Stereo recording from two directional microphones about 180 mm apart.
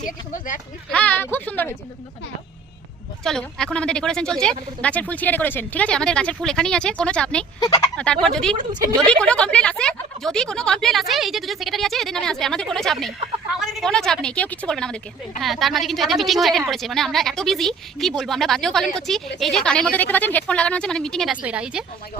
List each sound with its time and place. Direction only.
0.0 s speech: 45° left (ahead or behind)
0.9 s speech: 10° left (ahead or behind)
3.2 s a woman's voice: 5° left (ahead or behind)
7.6 s speech: 20° left (ahead or behind)
7.9 s a woman's voice: 5° left (ahead or behind)
8.5 s a woman's voice: 25° right (ahead or behind)
9.0 s a woman's voice: 5° left (ahead or behind)